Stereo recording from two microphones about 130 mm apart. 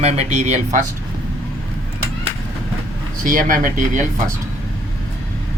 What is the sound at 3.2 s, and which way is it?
Speech, 90° right.